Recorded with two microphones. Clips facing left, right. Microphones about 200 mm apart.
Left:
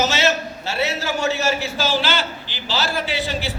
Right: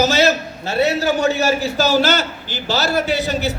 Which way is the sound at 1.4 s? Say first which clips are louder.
Right 5 dB; 40° right (ahead or behind).